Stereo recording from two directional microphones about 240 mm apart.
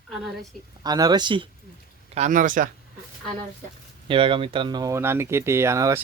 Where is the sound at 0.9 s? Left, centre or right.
Centre.